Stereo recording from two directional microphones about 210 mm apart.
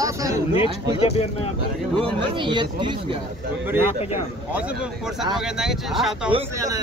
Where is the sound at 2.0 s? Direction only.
25° right (ahead or behind).